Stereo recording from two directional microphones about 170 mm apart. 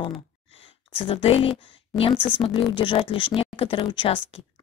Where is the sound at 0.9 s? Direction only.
35° left (ahead or behind).